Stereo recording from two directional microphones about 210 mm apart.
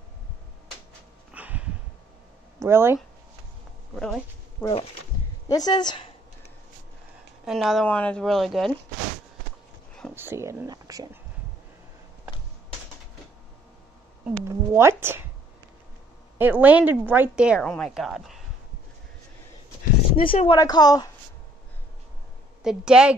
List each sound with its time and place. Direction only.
1.3 s a sound: 5° right (ahead or behind)
2.6 s speech: 10° right (ahead or behind)
3.9 s speech: centre (ahead or behind)
5.5 s speech: 20° left (ahead or behind)
7.4 s a woman's voice: centre (ahead or behind)
10.1 s speech: 10° right (ahead or behind)
14.5 s speech: 10° right (ahead or behind)
16.3 s a woman's voice: 10° right (ahead or behind)
20.2 s speech: 25° left (ahead or behind)
22.6 s a woman's voice: 5° right (ahead or behind)